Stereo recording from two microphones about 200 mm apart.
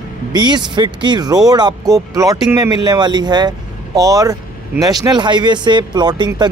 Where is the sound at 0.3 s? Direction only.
20° right (ahead or behind).